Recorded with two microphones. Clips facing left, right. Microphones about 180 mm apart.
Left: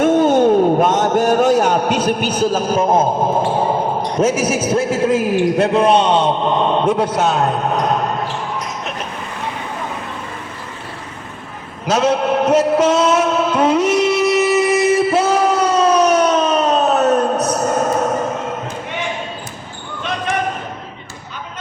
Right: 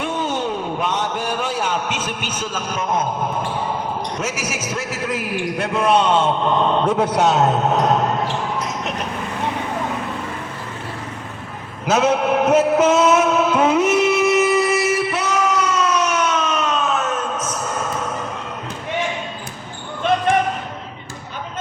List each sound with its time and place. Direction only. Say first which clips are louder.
0.0 s a sound: left 11 dB; 45° left (ahead or behind)
3.5 s basketball bounce: left 7 dB; 40° left (ahead or behind)
4.2 s a man's voice: left 10 dB; 30° left (ahead or behind)
7.0 s a man's voice: even; 20° right (ahead or behind)
11.9 s a man's voice: left 1 dB; 10° right (ahead or behind)
14.5 s a sound: left 4 dB; 20° left (ahead or behind); by 18.6 s 45° left (ahead or behind)
20.3 s basketball bounce: right 3 dB; 55° right (ahead or behind)